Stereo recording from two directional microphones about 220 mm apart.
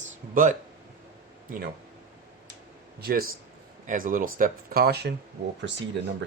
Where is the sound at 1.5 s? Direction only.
40° right (ahead or behind).